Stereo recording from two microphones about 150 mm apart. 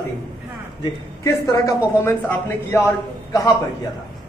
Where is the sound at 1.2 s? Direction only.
20° left (ahead or behind).